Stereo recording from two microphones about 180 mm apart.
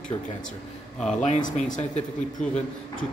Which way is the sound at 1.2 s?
45° left (ahead or behind).